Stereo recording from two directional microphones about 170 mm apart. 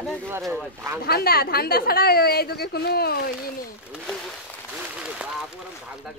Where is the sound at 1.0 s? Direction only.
65° left (ahead or behind).